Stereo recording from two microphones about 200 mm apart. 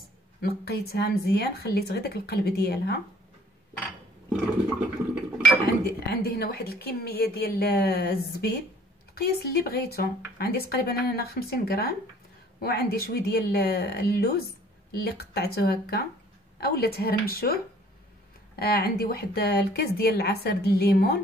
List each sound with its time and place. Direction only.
0.4 s a woman's voice: 50° left (ahead or behind)
4.3 s toilet flush: 5° right (ahead or behind)
5.9 s a woman's voice: 50° left (ahead or behind)
18.6 s a woman's voice: 50° left (ahead or behind)